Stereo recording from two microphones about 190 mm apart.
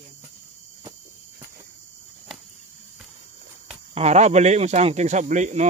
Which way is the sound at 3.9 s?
35° right (ahead or behind).